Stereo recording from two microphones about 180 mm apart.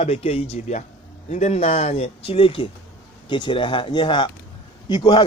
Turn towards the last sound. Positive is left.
turn(degrees=25)  # may be behind; listen again after turning